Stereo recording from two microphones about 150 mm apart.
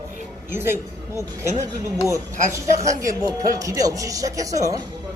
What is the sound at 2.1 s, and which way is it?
Speech, 20° right (ahead or behind).